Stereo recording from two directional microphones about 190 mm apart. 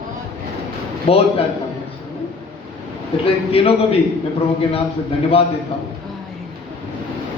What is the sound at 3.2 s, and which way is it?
Speech, 30° left (ahead or behind).